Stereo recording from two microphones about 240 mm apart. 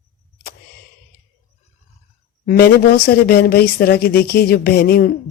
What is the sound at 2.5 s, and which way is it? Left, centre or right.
Speech, left.